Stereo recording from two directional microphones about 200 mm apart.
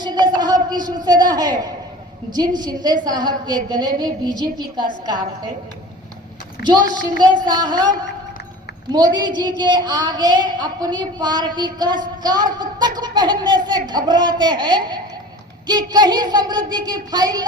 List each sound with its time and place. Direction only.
0.0 s a sound: 20° right (ahead or behind)
2.3 s a woman's voice: 20° right (ahead or behind)
7.4 s a woman's voice: 20° right (ahead or behind)